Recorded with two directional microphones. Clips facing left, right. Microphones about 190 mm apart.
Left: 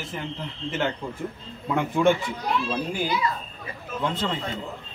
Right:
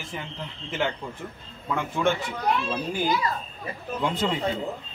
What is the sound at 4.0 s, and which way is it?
Speech, 10° right (ahead or behind).